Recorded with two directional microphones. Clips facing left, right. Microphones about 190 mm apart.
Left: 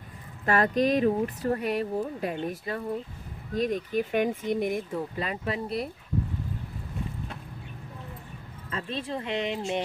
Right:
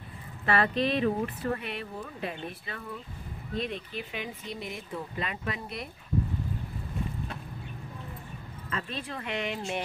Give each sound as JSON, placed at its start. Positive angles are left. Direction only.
{"t": 0.5, "sound": "speech", "side_deg": 45}
{"t": 5.1, "sound": "speech", "side_deg": 35}
{"t": 8.6, "sound": "speech", "side_deg": 30}